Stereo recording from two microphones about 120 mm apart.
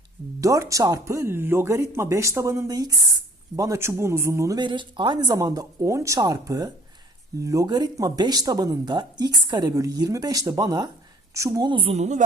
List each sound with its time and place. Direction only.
0.4 s speech: 25° right (ahead or behind)
4.6 s speech: 40° right (ahead or behind)
11.9 s speech: 75° right (ahead or behind)